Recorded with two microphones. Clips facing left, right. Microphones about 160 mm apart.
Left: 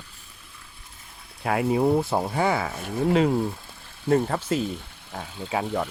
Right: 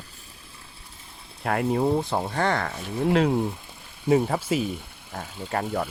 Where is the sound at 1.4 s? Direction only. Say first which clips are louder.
Left 1 dB; centre (ahead or behind).